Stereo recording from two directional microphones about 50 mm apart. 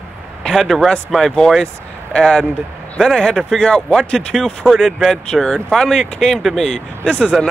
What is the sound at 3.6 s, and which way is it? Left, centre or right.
Speech, centre.